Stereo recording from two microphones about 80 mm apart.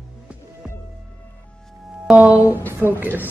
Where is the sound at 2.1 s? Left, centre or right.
Centre.